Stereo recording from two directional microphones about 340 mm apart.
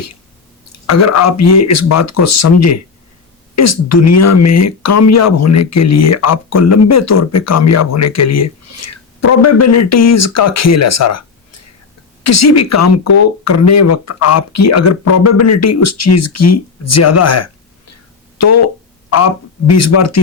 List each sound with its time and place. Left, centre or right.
0.7 s speech: left
19.7 s speech: left